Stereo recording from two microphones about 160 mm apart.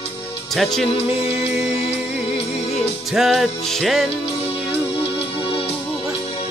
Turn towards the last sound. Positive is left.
turn(degrees=35)  # may be behind; listen again after turning